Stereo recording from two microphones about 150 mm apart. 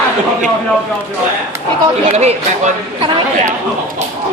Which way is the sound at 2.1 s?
45° right (ahead or behind).